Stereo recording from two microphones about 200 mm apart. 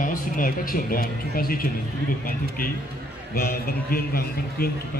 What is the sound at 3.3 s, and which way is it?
A man's voice, 50° left (ahead or behind).